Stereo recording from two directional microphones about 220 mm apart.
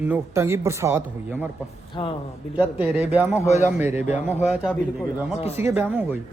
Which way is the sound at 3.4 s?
30° left (ahead or behind).